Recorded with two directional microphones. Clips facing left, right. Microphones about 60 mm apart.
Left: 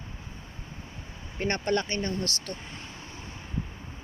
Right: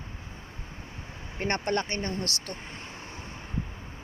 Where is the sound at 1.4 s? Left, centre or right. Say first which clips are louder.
Left 1 dB; right.